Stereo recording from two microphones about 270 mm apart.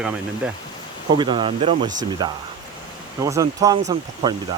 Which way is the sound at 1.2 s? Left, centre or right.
Centre.